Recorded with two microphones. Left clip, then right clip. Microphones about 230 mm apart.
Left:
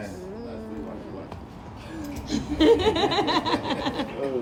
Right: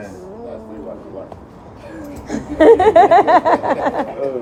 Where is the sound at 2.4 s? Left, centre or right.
Left.